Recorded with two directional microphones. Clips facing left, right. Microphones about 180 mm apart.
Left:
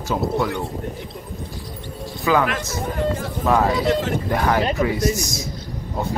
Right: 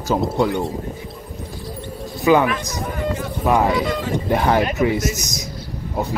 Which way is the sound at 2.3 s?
20° right (ahead or behind).